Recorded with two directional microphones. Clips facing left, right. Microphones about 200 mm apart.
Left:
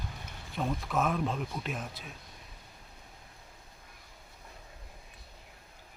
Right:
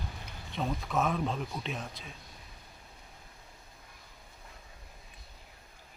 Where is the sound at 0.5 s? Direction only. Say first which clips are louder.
Even; centre (ahead or behind).